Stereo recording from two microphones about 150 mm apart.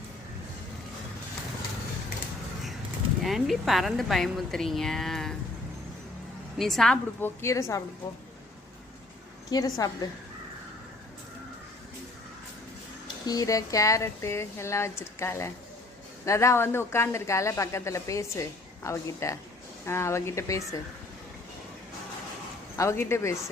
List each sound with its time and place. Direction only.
3.2 s a woman's voice: centre (ahead or behind)
6.6 s a woman's voice: centre (ahead or behind)
7.4 s a woman's voice: 20° left (ahead or behind)
9.5 s a woman's voice: 25° left (ahead or behind)
13.2 s a woman's voice: 25° left (ahead or behind)
22.8 s a woman's voice: 20° left (ahead or behind)